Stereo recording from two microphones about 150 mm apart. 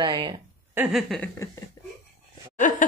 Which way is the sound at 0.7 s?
10° right (ahead or behind).